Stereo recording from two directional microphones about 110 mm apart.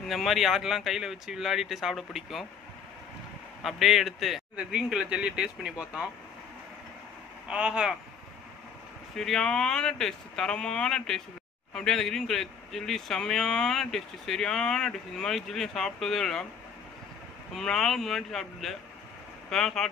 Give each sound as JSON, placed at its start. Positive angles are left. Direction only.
{"t": 0.1, "sound": "a man's voice", "side_deg": 0}
{"t": 3.6, "sound": "a man's voice", "side_deg": 0}
{"t": 7.4, "sound": "speech", "side_deg": -10}
{"t": 9.1, "sound": "a man's voice", "side_deg": 5}
{"t": 17.6, "sound": "a man's voice", "side_deg": 5}